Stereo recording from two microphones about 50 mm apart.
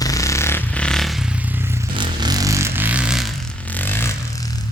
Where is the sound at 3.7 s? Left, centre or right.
Left.